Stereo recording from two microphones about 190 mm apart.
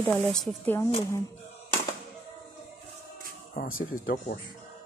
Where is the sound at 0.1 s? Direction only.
Centre (ahead or behind).